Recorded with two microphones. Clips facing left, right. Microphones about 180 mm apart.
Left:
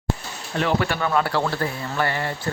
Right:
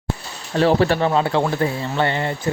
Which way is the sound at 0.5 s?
35° right (ahead or behind).